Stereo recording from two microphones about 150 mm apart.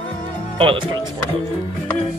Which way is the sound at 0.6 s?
35° right (ahead or behind).